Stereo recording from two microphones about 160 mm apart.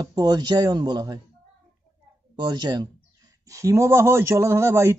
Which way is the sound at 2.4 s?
25° right (ahead or behind).